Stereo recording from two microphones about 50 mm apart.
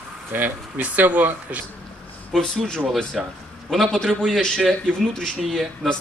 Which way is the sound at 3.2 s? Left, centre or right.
Centre.